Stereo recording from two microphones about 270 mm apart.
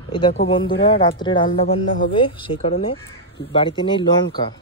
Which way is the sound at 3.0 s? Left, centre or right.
Left.